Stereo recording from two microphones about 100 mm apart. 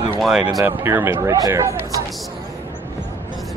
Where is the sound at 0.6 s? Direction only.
20° right (ahead or behind).